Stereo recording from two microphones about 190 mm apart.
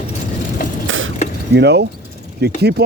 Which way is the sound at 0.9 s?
90° right.